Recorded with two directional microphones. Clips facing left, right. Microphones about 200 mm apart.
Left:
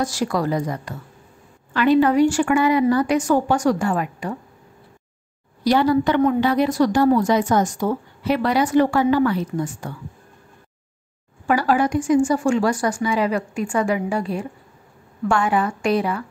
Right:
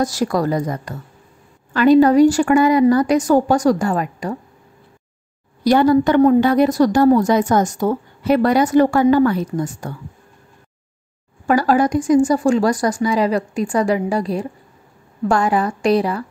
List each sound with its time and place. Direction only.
0.0 s a woman's voice: 40° right (ahead or behind)
5.6 s a woman's voice: 45° right (ahead or behind)
11.4 s a woman's voice: 40° right (ahead or behind)